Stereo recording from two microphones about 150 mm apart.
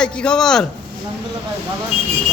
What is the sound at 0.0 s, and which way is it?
Speech, 5° left (ahead or behind).